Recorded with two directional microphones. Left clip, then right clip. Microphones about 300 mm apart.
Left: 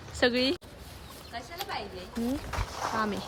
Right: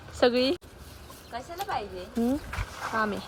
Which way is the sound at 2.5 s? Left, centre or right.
Centre.